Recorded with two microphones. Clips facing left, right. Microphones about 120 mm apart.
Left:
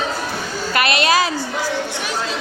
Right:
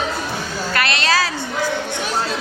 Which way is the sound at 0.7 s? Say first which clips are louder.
Left 3 dB; 20° left (ahead or behind).